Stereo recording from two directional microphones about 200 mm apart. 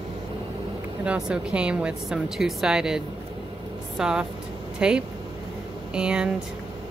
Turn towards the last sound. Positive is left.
turn(degrees=-5)  # may be behind; listen again after turning